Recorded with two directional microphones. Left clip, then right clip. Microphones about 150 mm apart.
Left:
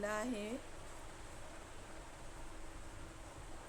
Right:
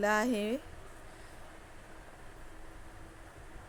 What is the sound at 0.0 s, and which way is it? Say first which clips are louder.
Speech: right 10 dB; 45° right (ahead or behind).